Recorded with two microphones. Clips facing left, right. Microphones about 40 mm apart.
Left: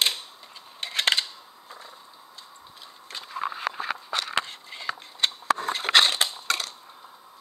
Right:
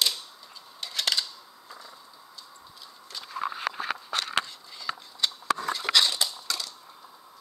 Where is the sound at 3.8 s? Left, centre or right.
Left.